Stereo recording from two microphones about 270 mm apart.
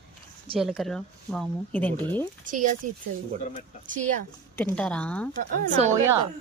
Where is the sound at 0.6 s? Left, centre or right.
Centre.